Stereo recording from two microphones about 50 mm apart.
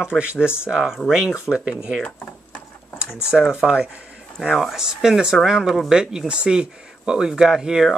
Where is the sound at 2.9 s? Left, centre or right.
Centre.